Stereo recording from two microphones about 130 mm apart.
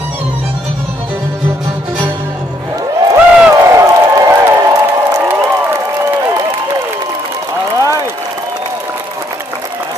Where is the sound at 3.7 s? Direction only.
25° right (ahead or behind).